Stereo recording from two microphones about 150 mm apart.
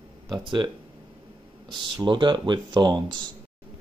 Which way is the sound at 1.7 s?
30° right (ahead or behind).